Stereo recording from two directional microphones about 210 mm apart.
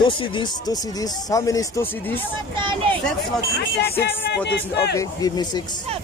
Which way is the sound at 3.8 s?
55° left (ahead or behind).